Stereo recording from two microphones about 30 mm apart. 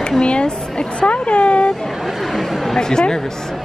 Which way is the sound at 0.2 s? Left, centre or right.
Left.